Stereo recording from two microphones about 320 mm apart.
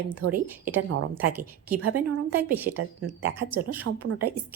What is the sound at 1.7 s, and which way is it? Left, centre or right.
Speech, right.